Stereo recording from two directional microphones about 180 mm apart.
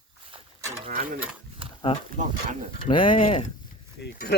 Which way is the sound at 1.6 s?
30° right (ahead or behind).